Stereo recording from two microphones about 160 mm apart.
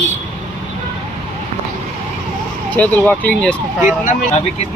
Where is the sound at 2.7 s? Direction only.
10° left (ahead or behind).